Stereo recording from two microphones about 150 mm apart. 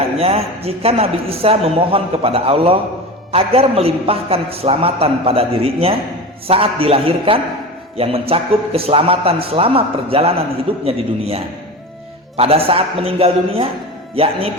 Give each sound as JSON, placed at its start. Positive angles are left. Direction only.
{"t": 0.2, "sound": "a man's voice", "side_deg": -40}